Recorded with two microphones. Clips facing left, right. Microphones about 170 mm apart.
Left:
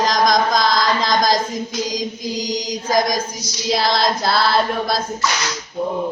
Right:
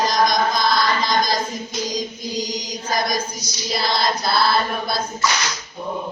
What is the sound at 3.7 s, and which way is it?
Female singing, 90° left.